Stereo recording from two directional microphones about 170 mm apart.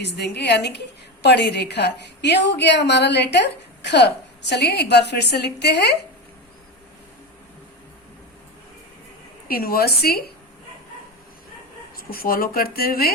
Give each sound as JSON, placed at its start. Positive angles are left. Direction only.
{"t": 0.0, "sound": "a woman's voice", "side_deg": 80}
{"t": 9.5, "sound": "speech", "side_deg": 60}
{"t": 11.9, "sound": "speech", "side_deg": 60}